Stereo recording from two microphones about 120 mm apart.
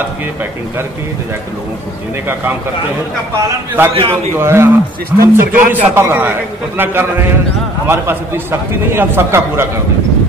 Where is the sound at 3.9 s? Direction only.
50° right (ahead or behind).